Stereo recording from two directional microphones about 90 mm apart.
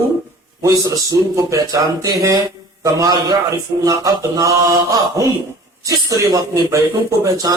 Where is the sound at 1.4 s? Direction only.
35° right (ahead or behind).